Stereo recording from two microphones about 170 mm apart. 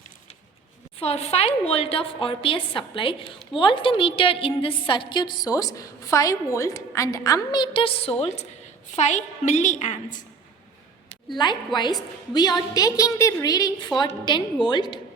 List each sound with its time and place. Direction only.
0.9 s a woman's voice: 35° left (ahead or behind)
11.3 s a woman's voice: 25° left (ahead or behind)